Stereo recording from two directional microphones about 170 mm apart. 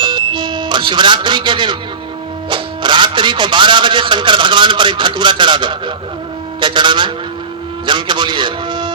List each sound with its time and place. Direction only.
0.0 s music: 25° right (ahead or behind)
2.5 s a man's voice: 30° right (ahead or behind)